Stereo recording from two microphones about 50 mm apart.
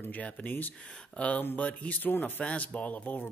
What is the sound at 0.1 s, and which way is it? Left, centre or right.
Speech, left.